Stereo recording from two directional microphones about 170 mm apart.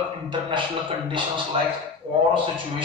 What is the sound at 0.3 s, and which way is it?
Speech, 30° right (ahead or behind).